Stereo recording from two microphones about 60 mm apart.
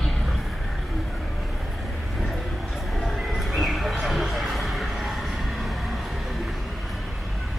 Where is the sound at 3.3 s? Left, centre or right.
Centre.